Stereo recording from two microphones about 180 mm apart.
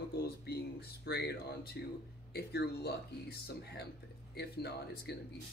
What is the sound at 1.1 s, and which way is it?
Speech, 60° left (ahead or behind).